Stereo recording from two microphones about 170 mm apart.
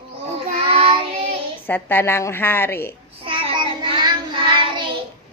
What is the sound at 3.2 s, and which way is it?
Child singing, 30° right (ahead or behind).